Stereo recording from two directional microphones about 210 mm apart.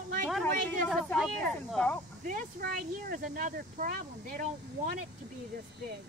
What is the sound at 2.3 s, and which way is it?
Speech, 40° right (ahead or behind).